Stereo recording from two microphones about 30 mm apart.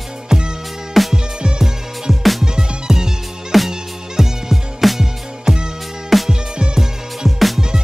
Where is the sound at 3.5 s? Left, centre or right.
Centre.